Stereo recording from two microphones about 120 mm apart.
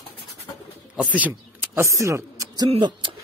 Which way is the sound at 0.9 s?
10° right (ahead or behind).